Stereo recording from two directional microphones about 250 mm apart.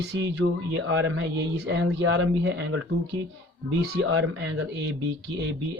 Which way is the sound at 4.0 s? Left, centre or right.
Right.